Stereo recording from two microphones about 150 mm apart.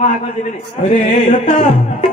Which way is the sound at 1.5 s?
50° left (ahead or behind).